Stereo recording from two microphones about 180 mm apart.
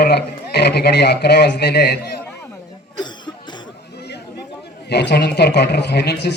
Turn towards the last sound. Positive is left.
turn(degrees=65)  # may be behind; listen again after turning